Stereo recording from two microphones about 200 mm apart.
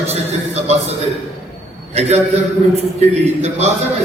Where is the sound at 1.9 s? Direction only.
30° right (ahead or behind).